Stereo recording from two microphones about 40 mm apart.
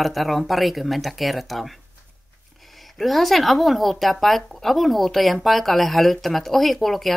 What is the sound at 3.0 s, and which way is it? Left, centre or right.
Speech, centre.